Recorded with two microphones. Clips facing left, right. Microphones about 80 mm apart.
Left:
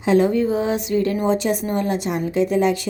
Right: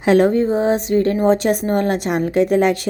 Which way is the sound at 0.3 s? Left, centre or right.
Right.